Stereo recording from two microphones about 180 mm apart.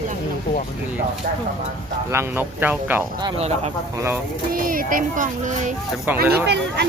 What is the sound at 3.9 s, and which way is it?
Speech, 15° right (ahead or behind).